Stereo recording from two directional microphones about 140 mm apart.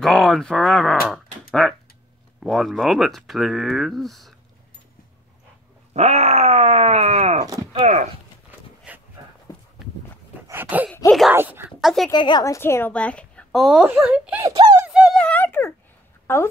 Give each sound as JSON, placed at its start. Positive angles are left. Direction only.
{"t": 0.0, "sound": "speech", "side_deg": 0}
{"t": 5.9, "sound": "speech", "side_deg": -50}
{"t": 8.9, "sound": "dog", "side_deg": -10}
{"t": 10.5, "sound": "groan", "side_deg": -15}
{"t": 11.1, "sound": "speech", "side_deg": 0}
{"t": 11.3, "sound": "speech", "side_deg": -15}
{"t": 11.8, "sound": "a woman's voice", "side_deg": 0}
{"t": 12.1, "sound": "a woman's voice", "side_deg": 30}
{"t": 12.5, "sound": "speech", "side_deg": 20}
{"t": 14.5, "sound": "a sound", "side_deg": -35}
{"t": 14.9, "sound": "a sound", "side_deg": -5}
{"t": 15.1, "sound": "a sound", "side_deg": 10}
{"t": 16.3, "sound": "speech", "side_deg": 15}